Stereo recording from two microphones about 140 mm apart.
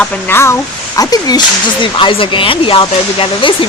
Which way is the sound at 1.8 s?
40° left (ahead or behind).